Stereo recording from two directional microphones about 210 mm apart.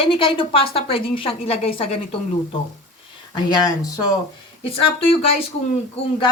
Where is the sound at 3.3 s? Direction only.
20° left (ahead or behind).